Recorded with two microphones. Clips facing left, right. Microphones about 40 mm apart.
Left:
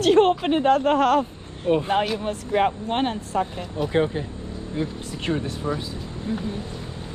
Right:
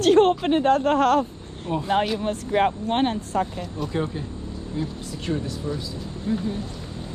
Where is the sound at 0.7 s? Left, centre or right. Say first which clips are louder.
Left 1 dB; left.